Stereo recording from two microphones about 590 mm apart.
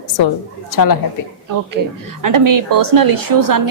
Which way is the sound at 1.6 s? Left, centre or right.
Right.